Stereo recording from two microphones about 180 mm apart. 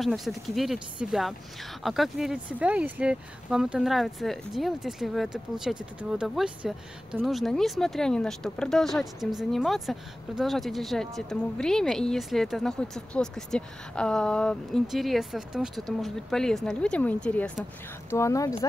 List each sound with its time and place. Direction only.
0.0 s speech: centre (ahead or behind); by 18.5 s 15° left (ahead or behind)